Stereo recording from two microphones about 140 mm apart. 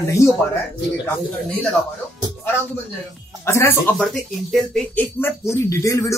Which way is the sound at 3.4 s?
15° left (ahead or behind).